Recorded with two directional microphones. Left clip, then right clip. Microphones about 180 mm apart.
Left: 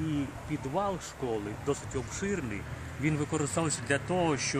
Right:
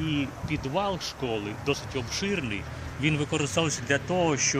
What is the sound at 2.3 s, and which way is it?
Speech, 45° right (ahead or behind).